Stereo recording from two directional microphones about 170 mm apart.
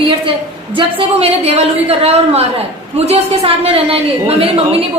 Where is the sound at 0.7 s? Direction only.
30° right (ahead or behind).